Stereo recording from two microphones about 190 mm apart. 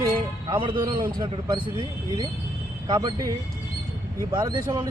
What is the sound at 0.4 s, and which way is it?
Speech, 25° right (ahead or behind).